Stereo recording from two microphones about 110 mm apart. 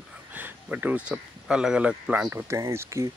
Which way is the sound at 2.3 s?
25° right (ahead or behind).